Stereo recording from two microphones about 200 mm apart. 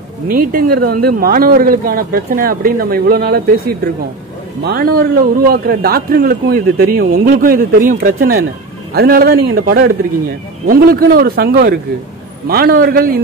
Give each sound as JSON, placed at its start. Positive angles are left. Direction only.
{"t": 0.3, "sound": "a man's voice", "side_deg": -45}